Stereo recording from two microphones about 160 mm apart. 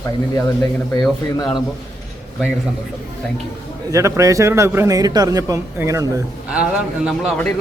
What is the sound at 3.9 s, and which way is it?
A man's voice, 20° right (ahead or behind).